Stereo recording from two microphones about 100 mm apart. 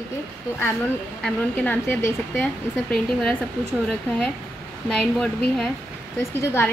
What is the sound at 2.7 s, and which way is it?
Speech, 5° left (ahead or behind).